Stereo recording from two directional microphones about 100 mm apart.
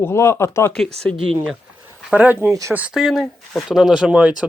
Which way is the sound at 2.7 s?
15° right (ahead or behind).